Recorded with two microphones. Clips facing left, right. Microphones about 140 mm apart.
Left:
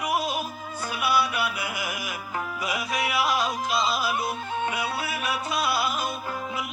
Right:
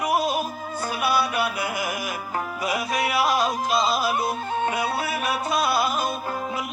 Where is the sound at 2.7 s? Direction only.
40° right (ahead or behind).